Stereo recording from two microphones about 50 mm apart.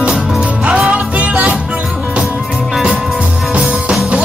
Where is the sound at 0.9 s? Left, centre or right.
Right.